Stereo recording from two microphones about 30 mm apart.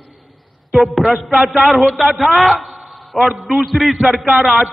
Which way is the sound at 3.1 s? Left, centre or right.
Centre.